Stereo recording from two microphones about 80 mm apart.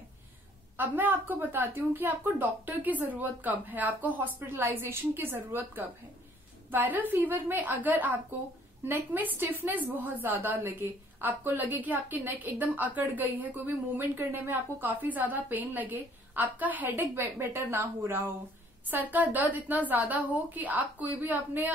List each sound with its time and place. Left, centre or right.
0.7 s a woman's voice: right